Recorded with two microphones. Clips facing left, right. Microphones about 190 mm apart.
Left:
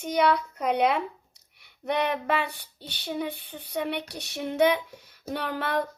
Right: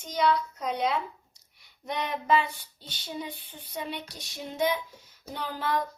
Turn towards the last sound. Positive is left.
turn(degrees=65)  # may be behind; listen again after turning